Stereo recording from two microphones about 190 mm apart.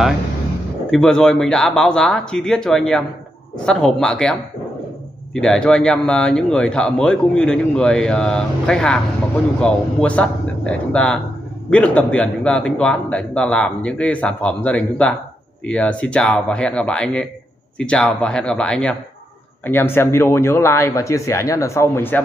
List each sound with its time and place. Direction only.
0.8 s a man's voice: 5° left (ahead or behind)